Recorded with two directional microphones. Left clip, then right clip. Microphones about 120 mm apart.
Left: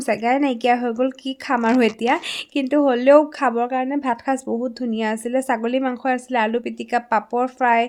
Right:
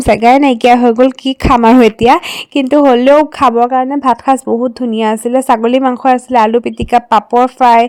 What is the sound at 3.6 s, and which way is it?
Speech, 45° right (ahead or behind).